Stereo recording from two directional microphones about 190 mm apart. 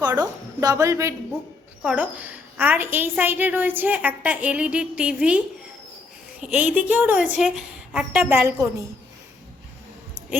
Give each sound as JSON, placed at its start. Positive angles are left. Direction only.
{"t": 0.1, "sound": "a woman's voice", "side_deg": -15}
{"t": 6.4, "sound": "a woman's voice", "side_deg": -5}